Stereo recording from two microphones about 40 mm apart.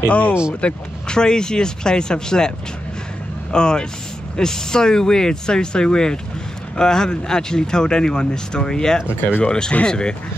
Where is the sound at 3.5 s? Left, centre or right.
Centre.